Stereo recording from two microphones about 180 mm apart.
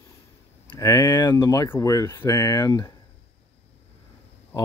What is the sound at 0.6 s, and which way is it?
Speech, 20° left (ahead or behind).